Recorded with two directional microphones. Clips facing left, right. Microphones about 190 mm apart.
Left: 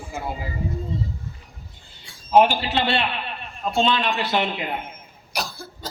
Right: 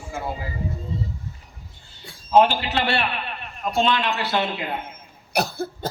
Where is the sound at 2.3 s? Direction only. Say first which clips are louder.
Even; 15° left (ahead or behind).